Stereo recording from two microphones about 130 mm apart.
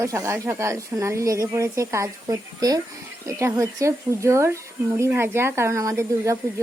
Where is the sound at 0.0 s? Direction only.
20° right (ahead or behind).